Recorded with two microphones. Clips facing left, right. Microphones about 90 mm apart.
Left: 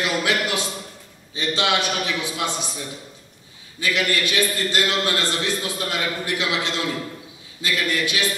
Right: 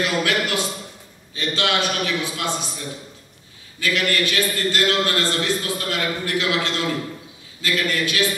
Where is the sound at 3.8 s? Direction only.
20° left (ahead or behind).